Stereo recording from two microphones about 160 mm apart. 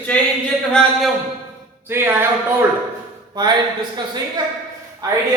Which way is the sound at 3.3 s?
25° right (ahead or behind).